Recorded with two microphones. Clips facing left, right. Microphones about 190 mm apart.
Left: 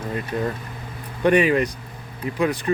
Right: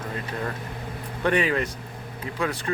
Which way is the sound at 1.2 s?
15° left (ahead or behind).